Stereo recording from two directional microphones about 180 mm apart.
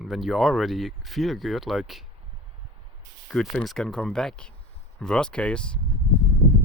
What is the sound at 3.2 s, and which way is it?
Speech, centre (ahead or behind).